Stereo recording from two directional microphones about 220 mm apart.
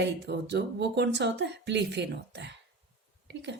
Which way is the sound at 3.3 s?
50° right (ahead or behind).